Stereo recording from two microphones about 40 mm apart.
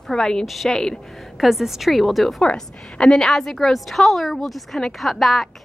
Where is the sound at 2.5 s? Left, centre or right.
Centre.